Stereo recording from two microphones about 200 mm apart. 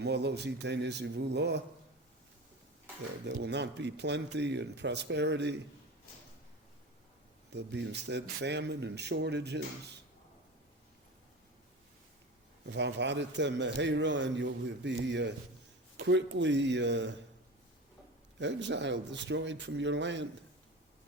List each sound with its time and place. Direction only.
0.0 s a man's voice: 55° right (ahead or behind)
3.4 s a man's voice: 60° right (ahead or behind)
7.5 s a man's voice: 60° right (ahead or behind)
12.7 s a man's voice: 60° right (ahead or behind)
18.3 s a man's voice: 60° right (ahead or behind)